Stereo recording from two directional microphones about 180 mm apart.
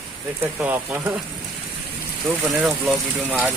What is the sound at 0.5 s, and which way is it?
Speech, 10° right (ahead or behind).